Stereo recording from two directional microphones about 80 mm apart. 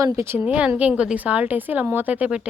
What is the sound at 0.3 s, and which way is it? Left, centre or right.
A woman's voice, centre.